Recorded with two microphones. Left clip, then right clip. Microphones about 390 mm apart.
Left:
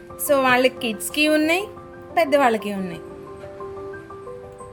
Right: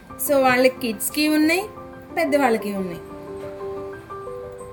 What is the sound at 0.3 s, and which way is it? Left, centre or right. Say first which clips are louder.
A woman's voice: even; left.